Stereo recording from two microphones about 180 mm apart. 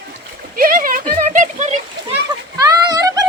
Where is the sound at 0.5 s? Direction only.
50° right (ahead or behind).